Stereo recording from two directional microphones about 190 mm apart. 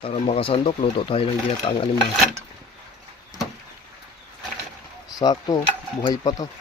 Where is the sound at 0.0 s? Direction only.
30° left (ahead or behind).